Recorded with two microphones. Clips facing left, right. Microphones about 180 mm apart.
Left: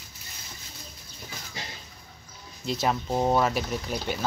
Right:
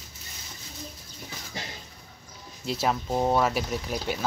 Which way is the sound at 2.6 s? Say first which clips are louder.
Even; 5° right (ahead or behind).